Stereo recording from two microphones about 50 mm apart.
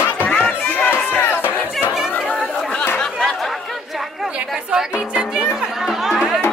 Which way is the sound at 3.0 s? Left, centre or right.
Centre.